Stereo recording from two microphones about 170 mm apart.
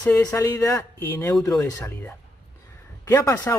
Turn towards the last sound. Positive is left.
turn(degrees=15)  # may be behind; listen again after turning